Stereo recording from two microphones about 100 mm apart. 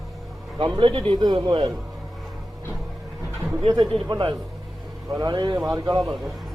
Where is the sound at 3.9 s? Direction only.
50° right (ahead or behind).